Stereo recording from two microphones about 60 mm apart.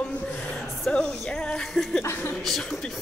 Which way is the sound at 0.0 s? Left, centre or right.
Centre.